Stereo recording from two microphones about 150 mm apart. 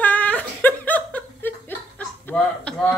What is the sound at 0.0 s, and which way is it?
Laughter, 10° left (ahead or behind).